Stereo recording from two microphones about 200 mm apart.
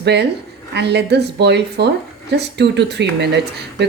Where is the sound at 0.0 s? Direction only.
55° right (ahead or behind).